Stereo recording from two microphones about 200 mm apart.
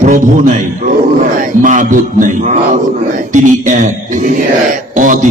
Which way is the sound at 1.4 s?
40° right (ahead or behind).